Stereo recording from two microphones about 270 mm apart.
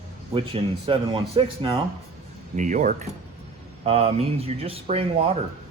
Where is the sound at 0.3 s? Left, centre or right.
Centre.